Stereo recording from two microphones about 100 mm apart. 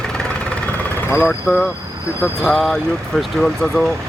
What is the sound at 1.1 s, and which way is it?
Speech, 25° left (ahead or behind).